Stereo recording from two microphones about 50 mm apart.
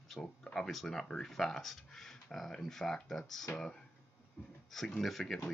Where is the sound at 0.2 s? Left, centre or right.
Left.